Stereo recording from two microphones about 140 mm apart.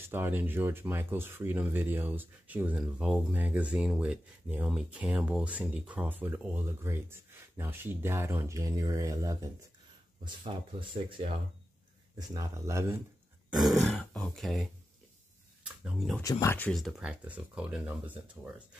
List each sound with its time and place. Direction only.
0.1 s speech: 15° right (ahead or behind)
10.2 s speech: 35° right (ahead or behind)
12.2 s speech: 25° right (ahead or behind)
13.5 s speech: centre (ahead or behind)
16.2 s speech: 20° left (ahead or behind)
16.5 s speech: 5° left (ahead or behind); by 18.5 s 10° right (ahead or behind)